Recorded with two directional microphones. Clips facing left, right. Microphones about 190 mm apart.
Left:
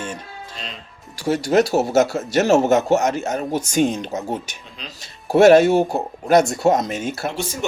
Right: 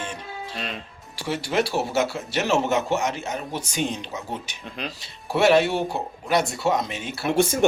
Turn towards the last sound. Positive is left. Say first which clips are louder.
# right 7 dB
turn(degrees=-50)  # may be behind; listen again after turning